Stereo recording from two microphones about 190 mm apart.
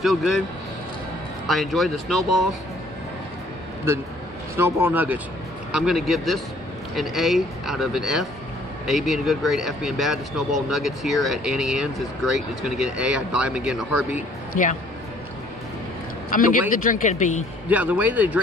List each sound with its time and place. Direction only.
0.0 s speech: centre (ahead or behind)
1.5 s speech: centre (ahead or behind)
4.6 s speech: 10° right (ahead or behind)
14.5 s speech: 40° left (ahead or behind)
16.3 s a man's voice: 45° left (ahead or behind)
17.6 s speech: 10° right (ahead or behind)